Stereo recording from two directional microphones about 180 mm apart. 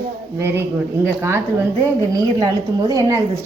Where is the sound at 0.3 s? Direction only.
15° right (ahead or behind).